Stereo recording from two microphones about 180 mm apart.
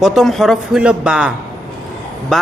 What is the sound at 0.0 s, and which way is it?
Speech, centre (ahead or behind).